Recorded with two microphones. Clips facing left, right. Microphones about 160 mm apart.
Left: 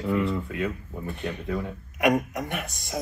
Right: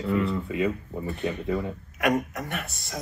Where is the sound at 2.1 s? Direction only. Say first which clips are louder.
Left 2 dB; 15° left (ahead or behind).